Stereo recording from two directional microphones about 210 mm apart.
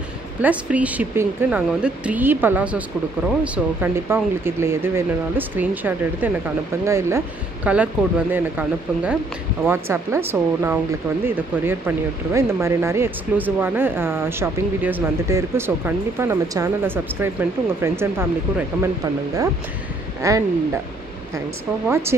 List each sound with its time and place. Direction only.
0.4 s speech: 5° right (ahead or behind)
20.2 s speech: 15° right (ahead or behind)
21.8 s speech: 10° right (ahead or behind)